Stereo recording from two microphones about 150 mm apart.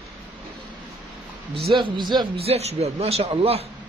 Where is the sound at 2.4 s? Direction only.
45° right (ahead or behind).